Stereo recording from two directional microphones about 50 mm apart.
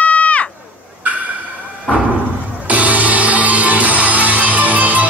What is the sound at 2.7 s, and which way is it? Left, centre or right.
Music, right.